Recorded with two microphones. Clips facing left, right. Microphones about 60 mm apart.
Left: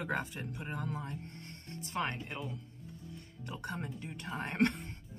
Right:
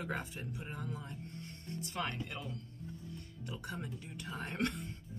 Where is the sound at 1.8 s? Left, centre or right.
Left.